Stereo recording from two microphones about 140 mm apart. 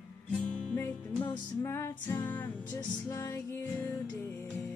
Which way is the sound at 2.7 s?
25° left (ahead or behind).